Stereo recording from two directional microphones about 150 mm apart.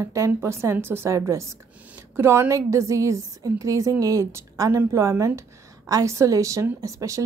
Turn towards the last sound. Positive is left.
turn(degrees=-20)  # may be behind; listen again after turning